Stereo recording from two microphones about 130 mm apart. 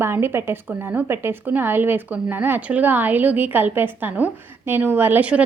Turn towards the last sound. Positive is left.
turn(degrees=-10)  # may be behind; listen again after turning